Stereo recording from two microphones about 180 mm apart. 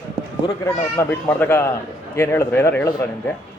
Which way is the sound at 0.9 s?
15° left (ahead or behind).